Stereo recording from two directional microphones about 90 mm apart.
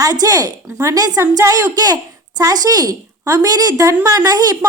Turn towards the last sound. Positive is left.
turn(degrees=-45)  # may be behind; listen again after turning